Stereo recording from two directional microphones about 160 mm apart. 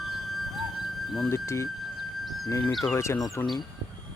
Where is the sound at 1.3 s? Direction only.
15° left (ahead or behind).